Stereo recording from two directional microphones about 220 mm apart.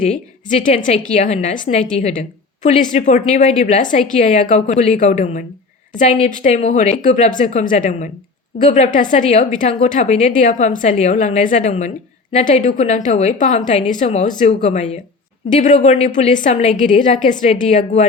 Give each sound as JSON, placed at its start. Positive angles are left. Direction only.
{"t": 0.0, "sound": "a woman's voice", "side_deg": 35}